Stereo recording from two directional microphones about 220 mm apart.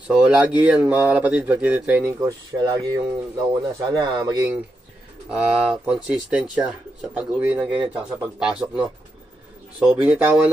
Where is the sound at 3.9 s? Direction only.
15° right (ahead or behind).